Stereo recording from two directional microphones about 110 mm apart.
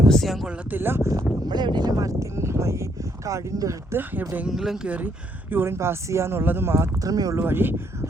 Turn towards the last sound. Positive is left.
turn(degrees=-20)  # may be behind; listen again after turning